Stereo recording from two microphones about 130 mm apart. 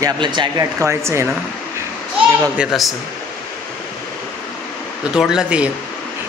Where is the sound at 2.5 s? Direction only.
5° right (ahead or behind).